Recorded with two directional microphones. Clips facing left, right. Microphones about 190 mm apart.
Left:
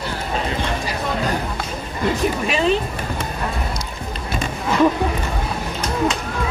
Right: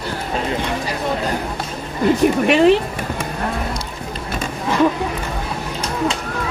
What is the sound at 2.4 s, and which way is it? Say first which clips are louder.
Speech: right 7 dB; 65° right (ahead or behind).